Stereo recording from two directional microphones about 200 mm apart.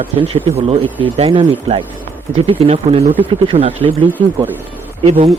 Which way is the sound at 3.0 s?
10° right (ahead or behind).